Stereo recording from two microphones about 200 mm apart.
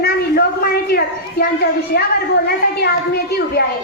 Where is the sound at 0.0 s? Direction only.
50° left (ahead or behind).